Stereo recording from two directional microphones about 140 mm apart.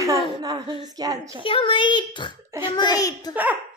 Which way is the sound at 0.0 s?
25° right (ahead or behind).